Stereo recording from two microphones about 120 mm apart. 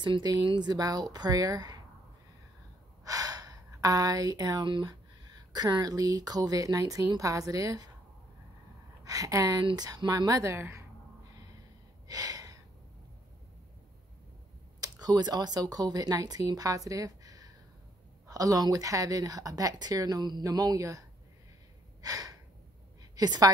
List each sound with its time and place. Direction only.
0.0 s speech: 35° right (ahead or behind)
3.1 s speech: 30° right (ahead or behind)
9.0 s speech: 30° right (ahead or behind)
12.1 s gasp: 30° right (ahead or behind)
14.8 s speech: 35° right (ahead or behind)
22.0 s a sound: 30° right (ahead or behind)
23.1 s a woman's voice: 35° right (ahead or behind)